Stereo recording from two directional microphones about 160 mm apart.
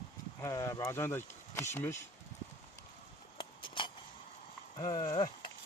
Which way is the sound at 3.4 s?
30° left (ahead or behind).